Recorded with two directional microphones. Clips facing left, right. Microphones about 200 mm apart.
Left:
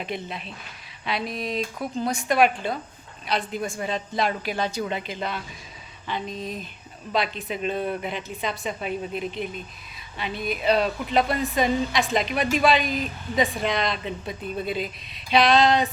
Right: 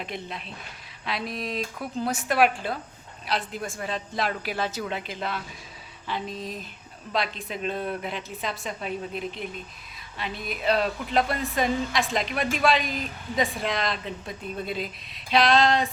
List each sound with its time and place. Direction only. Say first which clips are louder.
0.0 s a woman's voice: left 3 dB; centre (ahead or behind)